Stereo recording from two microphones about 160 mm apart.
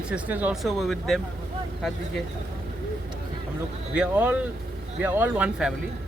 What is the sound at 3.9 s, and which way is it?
Speech, 10° right (ahead or behind).